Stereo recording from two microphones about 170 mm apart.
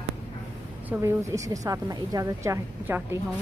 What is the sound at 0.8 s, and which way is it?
A woman's voice, 15° right (ahead or behind).